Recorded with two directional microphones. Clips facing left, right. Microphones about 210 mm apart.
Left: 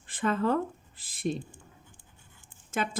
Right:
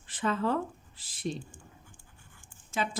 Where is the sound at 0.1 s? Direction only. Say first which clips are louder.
Left 2 dB; 50° left (ahead or behind).